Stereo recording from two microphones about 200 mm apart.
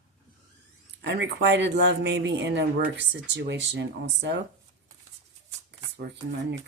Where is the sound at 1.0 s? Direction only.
60° right (ahead or behind).